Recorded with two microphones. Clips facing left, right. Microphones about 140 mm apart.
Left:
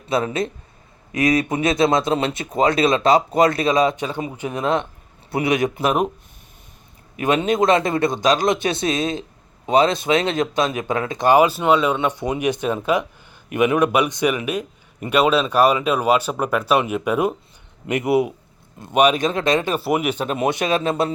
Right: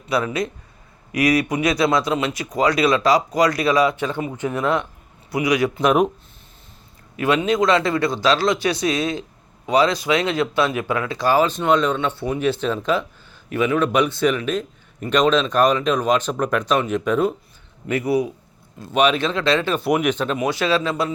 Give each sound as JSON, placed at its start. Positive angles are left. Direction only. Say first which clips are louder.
{"t": 0.1, "sound": "speech", "louder": "left 1 dB", "side_deg": 25}
{"t": 5.8, "sound": "speech", "louder": "right 6 dB", "side_deg": 0}
{"t": 7.3, "sound": "speech", "louder": "left 1 dB", "side_deg": 25}
{"t": 19.8, "sound": "speech", "louder": "right 1 dB", "side_deg": 5}
{"t": 20.3, "sound": "speech", "louder": "even", "side_deg": 25}